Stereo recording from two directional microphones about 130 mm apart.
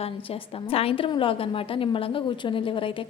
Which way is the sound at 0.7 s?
45° left (ahead or behind).